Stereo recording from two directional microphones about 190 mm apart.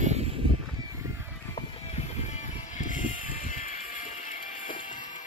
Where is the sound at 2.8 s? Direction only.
45° left (ahead or behind).